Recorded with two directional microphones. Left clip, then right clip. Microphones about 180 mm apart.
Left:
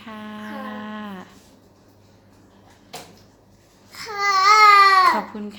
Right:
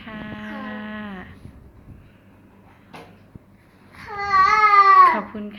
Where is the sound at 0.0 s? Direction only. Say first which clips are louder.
Right 1 dB; 20° left (ahead or behind).